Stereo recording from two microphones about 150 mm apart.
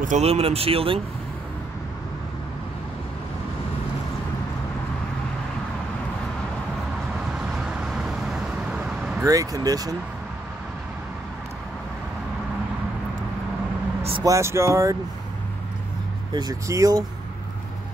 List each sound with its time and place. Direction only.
0.0 s speech: 50° right (ahead or behind)
7.3 s vehicle: 5° right (ahead or behind)
9.2 s speech: 25° right (ahead or behind)
14.2 s speech: 20° right (ahead or behind)
16.3 s speech: 25° right (ahead or behind)